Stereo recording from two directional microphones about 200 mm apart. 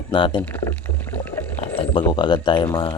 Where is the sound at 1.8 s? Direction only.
25° left (ahead or behind).